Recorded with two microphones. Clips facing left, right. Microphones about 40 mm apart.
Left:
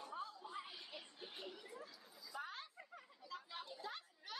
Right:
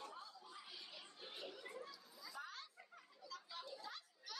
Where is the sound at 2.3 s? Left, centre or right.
Left.